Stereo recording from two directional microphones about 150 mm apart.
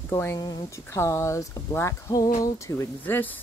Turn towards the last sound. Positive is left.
turn(degrees=10)  # may be behind; listen again after turning